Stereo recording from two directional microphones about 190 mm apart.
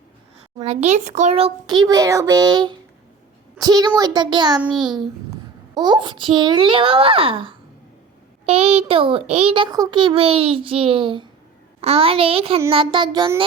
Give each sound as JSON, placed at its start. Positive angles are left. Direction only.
{"t": 0.6, "sound": "a child's voice", "side_deg": -35}